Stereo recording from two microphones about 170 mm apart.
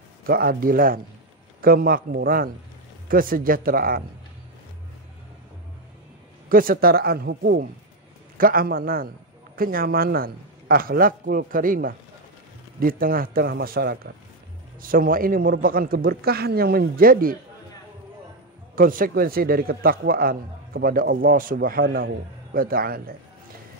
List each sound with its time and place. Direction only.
0.3 s a man's voice: 60° right (ahead or behind)
6.5 s a man's voice: 60° right (ahead or behind)
8.4 s a man's voice: 60° right (ahead or behind)
14.8 s a man's voice: 55° right (ahead or behind)
18.8 s a man's voice: 55° right (ahead or behind)